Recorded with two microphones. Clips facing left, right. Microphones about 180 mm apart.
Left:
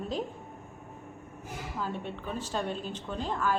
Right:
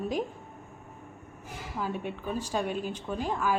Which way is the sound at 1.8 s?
10° right (ahead or behind).